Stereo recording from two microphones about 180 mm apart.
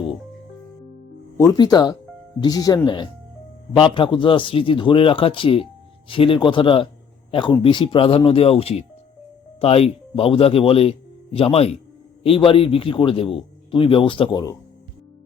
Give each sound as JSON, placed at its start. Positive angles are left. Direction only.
{"t": 1.4, "sound": "a man's voice", "side_deg": 20}